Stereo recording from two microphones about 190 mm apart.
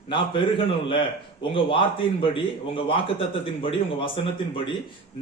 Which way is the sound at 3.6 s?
30° left (ahead or behind).